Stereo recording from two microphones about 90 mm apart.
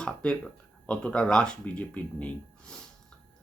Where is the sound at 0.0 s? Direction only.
10° left (ahead or behind).